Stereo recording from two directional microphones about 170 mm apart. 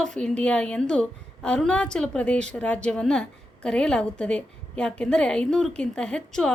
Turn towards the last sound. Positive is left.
turn(degrees=5)  # may be behind; listen again after turning